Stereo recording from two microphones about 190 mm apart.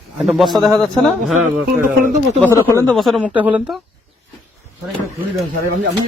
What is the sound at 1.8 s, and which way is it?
Speech, 45° right (ahead or behind).